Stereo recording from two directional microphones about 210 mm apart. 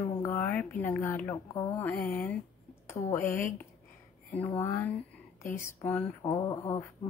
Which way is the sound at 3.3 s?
40° left (ahead or behind).